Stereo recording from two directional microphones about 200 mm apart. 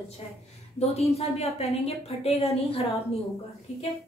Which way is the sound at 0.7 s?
30° left (ahead or behind).